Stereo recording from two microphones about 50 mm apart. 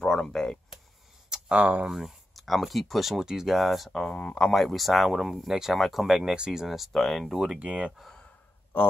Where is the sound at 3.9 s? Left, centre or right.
Centre.